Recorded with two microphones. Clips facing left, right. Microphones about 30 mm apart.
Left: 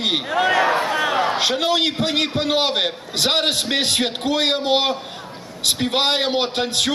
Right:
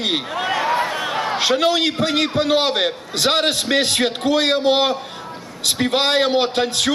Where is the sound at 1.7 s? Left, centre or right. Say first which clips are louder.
Right 1 dB; left.